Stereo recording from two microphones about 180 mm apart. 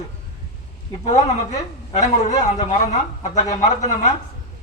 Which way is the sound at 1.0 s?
40° left (ahead or behind).